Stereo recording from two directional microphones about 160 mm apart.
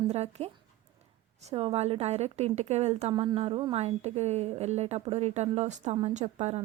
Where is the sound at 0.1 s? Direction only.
40° right (ahead or behind).